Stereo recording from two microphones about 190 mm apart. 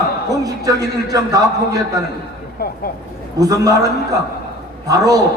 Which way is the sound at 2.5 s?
50° left (ahead or behind).